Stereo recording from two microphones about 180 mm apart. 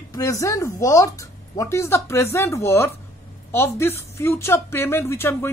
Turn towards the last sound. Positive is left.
turn(degrees=15)  # may be behind; listen again after turning